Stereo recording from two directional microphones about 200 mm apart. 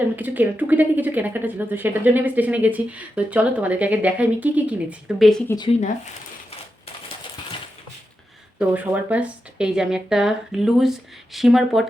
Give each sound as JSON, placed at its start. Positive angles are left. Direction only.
{"t": 0.2, "sound": "speech", "side_deg": -10}
{"t": 5.5, "sound": "speech", "side_deg": 20}
{"t": 8.5, "sound": "speech", "side_deg": -10}